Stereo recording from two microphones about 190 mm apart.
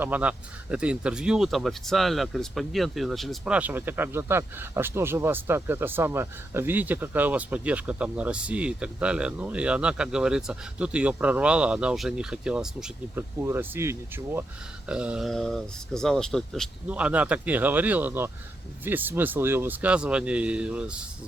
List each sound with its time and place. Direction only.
0.0 s speech: 10° right (ahead or behind)